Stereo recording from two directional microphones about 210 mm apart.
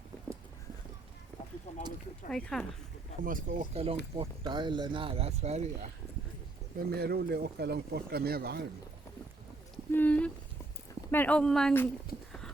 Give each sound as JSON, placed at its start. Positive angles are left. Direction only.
{"t": 1.7, "sound": "a sound", "side_deg": 30}
{"t": 2.3, "sound": "speech", "side_deg": 5}
{"t": 3.2, "sound": "speech", "side_deg": -35}
{"t": 4.2, "sound": "speech", "side_deg": -20}
{"t": 6.7, "sound": "speech", "side_deg": -50}
{"t": 9.9, "sound": "a sound", "side_deg": 10}
{"t": 11.1, "sound": "speech", "side_deg": 5}